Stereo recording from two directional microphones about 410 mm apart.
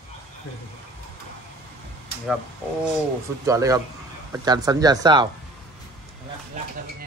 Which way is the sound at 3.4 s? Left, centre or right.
Centre.